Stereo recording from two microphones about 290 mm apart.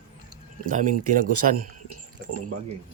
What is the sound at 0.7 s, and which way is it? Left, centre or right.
Speech, right.